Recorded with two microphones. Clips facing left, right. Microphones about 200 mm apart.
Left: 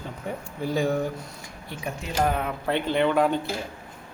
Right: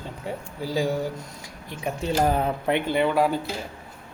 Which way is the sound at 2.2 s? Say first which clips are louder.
Right 3 dB; 35° right (ahead or behind).